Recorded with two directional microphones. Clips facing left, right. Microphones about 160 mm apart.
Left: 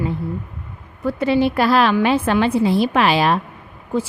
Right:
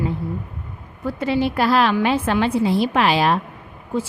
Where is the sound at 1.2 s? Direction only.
75° left (ahead or behind).